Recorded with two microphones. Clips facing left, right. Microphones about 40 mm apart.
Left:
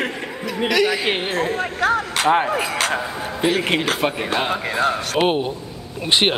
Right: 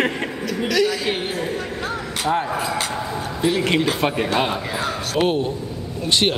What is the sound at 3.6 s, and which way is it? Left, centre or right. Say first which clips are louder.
Speech: right 1 dB; left.